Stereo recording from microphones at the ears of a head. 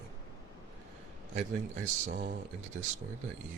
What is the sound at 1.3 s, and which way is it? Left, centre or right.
Speech, right.